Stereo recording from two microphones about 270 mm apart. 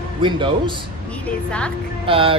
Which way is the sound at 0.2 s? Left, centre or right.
Centre.